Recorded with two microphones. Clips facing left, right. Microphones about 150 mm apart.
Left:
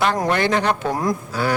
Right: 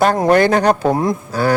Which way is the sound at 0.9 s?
25° right (ahead or behind).